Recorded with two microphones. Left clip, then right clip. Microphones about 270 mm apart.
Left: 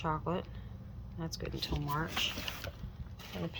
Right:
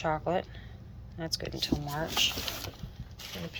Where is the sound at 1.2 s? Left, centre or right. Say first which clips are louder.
Right 6 dB; centre.